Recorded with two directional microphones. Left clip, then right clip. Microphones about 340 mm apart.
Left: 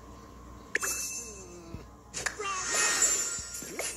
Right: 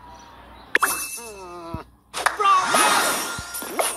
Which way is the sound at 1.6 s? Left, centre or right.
Centre.